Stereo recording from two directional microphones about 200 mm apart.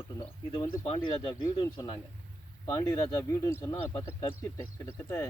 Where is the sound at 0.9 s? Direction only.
25° left (ahead or behind).